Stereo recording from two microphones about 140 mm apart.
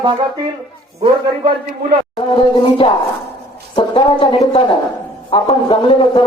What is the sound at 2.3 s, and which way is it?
A man's voice, 40° left (ahead or behind).